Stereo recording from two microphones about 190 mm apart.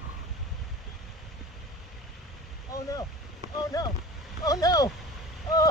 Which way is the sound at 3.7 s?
20° left (ahead or behind).